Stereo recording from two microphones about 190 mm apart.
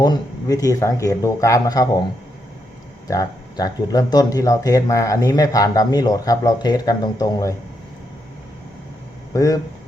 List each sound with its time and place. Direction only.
0.0 s speech: 20° left (ahead or behind)
3.1 s speech: 20° left (ahead or behind)
9.3 s speech: 20° left (ahead or behind)